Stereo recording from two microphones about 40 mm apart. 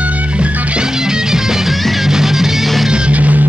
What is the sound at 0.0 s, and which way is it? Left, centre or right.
Music, right.